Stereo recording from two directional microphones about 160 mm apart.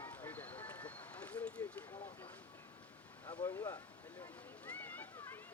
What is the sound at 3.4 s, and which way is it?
Speech, 15° left (ahead or behind).